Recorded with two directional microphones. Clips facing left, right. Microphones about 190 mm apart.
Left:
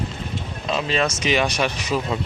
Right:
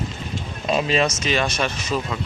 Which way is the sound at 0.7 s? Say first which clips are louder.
Right 3 dB; 15° right (ahead or behind).